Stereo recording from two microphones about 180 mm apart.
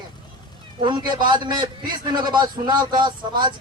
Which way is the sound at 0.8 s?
25° right (ahead or behind).